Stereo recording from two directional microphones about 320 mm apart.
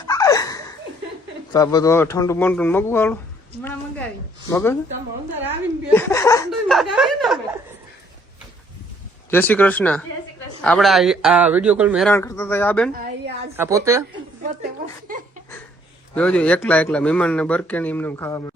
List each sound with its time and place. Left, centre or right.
0.1 s laughter: centre
1.5 s speech: centre
4.4 s speech: centre
5.9 s speech: centre
6.9 s a sound: centre
9.3 s speech: centre
12.9 s a sound: right
13.6 s a woman's voice: centre
16.1 s speech: centre